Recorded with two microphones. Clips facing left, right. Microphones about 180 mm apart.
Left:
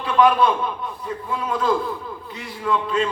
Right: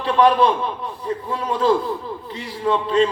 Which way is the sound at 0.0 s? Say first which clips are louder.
Right 1 dB; 30° right (ahead or behind).